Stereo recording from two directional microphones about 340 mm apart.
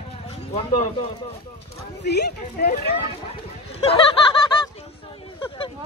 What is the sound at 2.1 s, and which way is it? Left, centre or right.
Speech, left.